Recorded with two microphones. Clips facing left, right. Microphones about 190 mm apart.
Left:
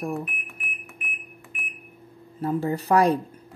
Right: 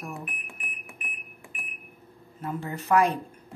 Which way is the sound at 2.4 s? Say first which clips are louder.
Left 8 dB; 35° left (ahead or behind).